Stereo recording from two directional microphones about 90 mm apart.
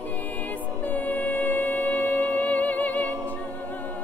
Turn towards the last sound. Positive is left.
turn(degrees=20)  # may be behind; listen again after turning